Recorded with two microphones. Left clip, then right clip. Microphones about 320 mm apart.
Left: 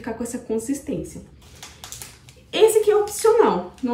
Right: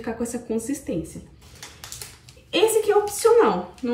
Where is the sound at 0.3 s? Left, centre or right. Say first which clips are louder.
Left 2 dB; centre.